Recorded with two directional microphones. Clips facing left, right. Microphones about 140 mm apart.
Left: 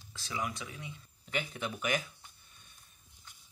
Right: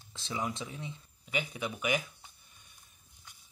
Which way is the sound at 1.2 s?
10° right (ahead or behind).